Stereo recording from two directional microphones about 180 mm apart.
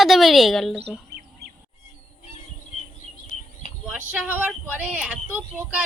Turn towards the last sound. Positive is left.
turn(degrees=-10)  # may be behind; listen again after turning